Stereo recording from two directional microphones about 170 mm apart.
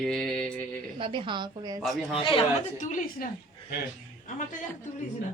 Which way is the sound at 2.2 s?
30° left (ahead or behind).